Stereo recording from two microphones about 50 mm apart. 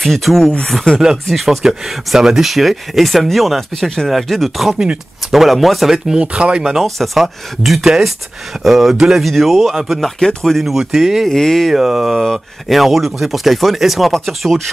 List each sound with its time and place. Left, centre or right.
0.0 s speech: centre
6.0 s speech: centre
6.7 s speech: centre
9.2 s speech: centre
11.3 s speech: centre
11.7 s speech: centre